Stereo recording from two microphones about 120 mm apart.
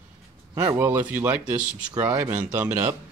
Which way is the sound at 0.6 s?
25° right (ahead or behind).